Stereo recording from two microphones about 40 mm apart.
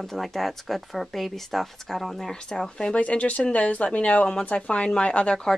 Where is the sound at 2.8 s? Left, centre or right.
Left.